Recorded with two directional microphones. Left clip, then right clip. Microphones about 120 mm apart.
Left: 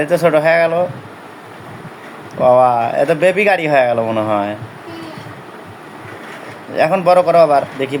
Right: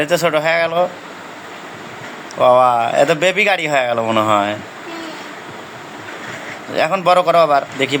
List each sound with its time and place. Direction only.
0.0 s speech: 15° left (ahead or behind)
2.4 s speech: 15° left (ahead or behind)
6.7 s speech: 15° left (ahead or behind)